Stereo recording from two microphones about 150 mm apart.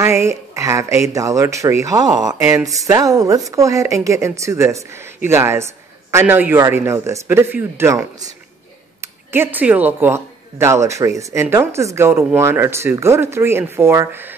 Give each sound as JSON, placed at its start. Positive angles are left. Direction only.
{"t": 0.0, "sound": "speech", "side_deg": -15}